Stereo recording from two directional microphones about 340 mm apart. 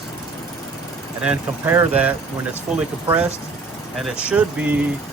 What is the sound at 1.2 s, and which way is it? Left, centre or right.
Speech, centre.